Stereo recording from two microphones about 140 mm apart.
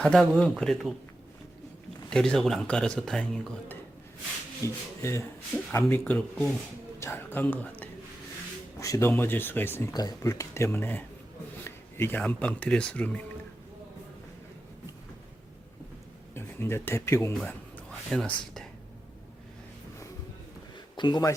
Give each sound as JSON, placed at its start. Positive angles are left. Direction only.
{"t": 0.0, "sound": "speech", "side_deg": 5}
{"t": 2.0, "sound": "speech", "side_deg": 5}
{"t": 4.6, "sound": "speech", "side_deg": 20}
{"t": 5.9, "sound": "speech", "side_deg": 10}
{"t": 9.9, "sound": "speech", "side_deg": 30}
{"t": 16.3, "sound": "speech", "side_deg": 15}
{"t": 18.1, "sound": "speech", "side_deg": 5}
{"t": 20.9, "sound": "speech", "side_deg": 35}